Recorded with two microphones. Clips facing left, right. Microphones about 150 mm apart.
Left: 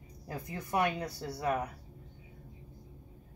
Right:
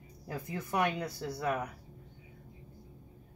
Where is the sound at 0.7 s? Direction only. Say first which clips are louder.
Left 1 dB; 35° left (ahead or behind).